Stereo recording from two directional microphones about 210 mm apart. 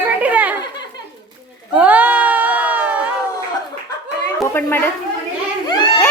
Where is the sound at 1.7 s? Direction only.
5° right (ahead or behind).